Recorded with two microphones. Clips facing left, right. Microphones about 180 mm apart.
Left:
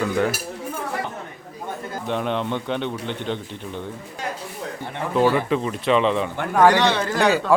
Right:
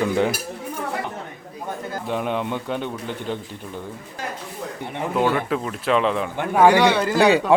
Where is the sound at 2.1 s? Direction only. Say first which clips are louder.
Left 1 dB; 5° right (ahead or behind).